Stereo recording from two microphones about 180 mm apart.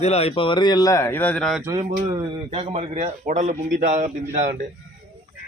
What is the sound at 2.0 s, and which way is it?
Speech, 30° right (ahead or behind).